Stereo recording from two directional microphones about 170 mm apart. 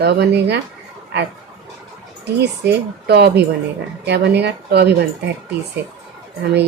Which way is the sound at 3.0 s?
75° right (ahead or behind).